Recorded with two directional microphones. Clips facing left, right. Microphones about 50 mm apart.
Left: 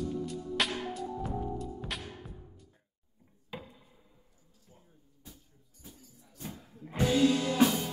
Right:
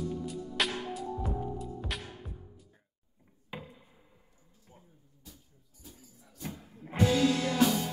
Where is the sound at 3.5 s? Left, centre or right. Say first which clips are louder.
Right 1 dB; centre.